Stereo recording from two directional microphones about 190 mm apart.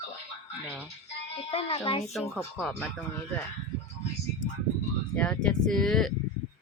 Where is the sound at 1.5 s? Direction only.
30° left (ahead or behind).